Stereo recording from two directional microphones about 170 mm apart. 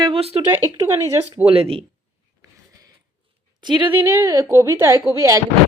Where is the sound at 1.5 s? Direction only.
35° right (ahead or behind).